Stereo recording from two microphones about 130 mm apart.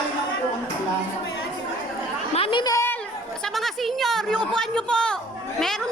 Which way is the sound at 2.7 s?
20° left (ahead or behind).